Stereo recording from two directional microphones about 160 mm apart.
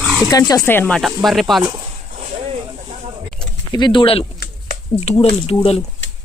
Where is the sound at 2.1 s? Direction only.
40° right (ahead or behind).